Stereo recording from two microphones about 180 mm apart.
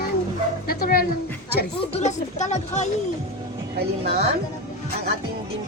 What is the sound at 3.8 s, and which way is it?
Speech, 60° right (ahead or behind).